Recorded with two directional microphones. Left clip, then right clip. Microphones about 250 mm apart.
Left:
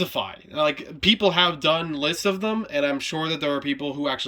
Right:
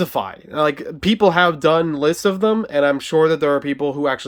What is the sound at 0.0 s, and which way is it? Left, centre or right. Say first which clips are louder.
Speech: right 5 dB; centre.